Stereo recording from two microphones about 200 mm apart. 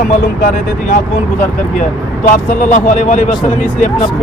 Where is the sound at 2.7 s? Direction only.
40° left (ahead or behind).